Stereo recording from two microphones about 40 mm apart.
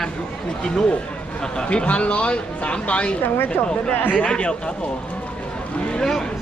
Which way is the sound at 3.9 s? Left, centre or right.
Left.